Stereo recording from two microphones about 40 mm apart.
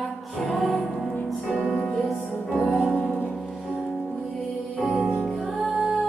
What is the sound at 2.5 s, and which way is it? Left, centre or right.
Music, centre.